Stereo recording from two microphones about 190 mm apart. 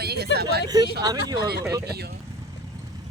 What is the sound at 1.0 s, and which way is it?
Speech, 20° right (ahead or behind).